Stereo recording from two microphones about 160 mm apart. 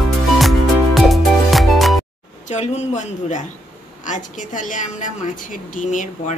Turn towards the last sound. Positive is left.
turn(degrees=50)  # may be behind; listen again after turning